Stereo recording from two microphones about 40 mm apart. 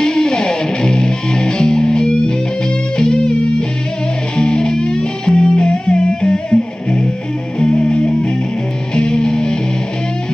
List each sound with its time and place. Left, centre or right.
0.0 s music: centre